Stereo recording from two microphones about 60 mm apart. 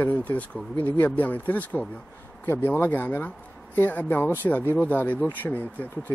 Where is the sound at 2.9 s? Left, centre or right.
Left.